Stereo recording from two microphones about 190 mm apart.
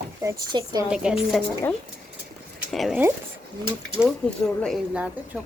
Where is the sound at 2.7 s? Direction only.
Centre (ahead or behind).